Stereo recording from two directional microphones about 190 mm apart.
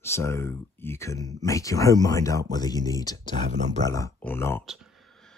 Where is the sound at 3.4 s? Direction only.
40° right (ahead or behind).